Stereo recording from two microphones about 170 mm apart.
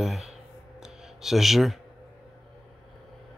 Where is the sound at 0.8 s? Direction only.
5° right (ahead or behind).